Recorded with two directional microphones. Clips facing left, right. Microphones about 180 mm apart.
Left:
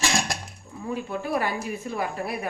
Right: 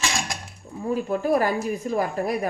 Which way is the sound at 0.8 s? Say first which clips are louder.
Right 6 dB; 40° right (ahead or behind).